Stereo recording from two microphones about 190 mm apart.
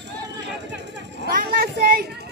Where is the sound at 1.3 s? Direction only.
50° right (ahead or behind).